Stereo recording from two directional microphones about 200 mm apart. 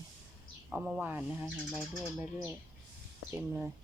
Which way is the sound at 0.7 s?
10° right (ahead or behind).